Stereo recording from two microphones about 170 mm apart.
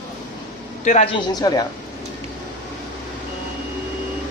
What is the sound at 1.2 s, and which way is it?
Speech, 25° left (ahead or behind).